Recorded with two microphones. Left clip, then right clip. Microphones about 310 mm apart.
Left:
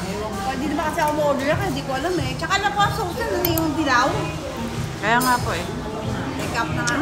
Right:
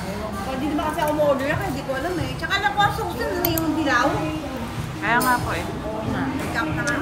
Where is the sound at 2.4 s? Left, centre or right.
Centre.